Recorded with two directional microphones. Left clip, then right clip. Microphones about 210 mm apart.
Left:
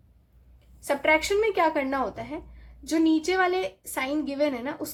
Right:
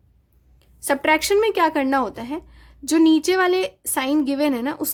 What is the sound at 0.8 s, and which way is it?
Speech, 50° right (ahead or behind).